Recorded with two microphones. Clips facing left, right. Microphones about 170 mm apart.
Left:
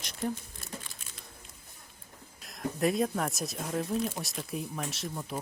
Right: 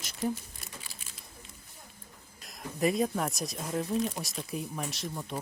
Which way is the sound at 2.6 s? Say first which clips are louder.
Even; centre (ahead or behind).